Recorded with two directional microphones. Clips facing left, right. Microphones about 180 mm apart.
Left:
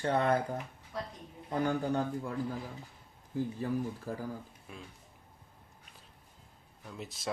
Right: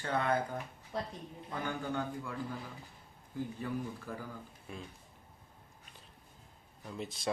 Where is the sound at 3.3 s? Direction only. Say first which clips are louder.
Left 4 dB; 35° left (ahead or behind).